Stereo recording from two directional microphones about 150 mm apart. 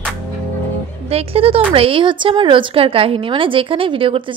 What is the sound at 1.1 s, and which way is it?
Speech, 40° right (ahead or behind).